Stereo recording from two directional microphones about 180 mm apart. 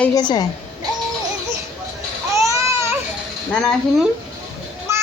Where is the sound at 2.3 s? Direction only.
15° right (ahead or behind).